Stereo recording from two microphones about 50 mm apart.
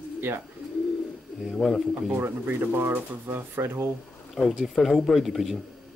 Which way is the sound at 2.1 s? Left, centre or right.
Right.